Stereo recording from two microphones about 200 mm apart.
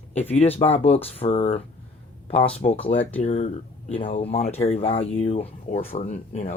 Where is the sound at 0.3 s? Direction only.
30° left (ahead or behind).